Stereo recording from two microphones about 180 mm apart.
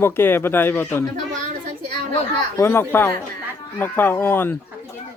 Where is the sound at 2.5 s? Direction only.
15° left (ahead or behind).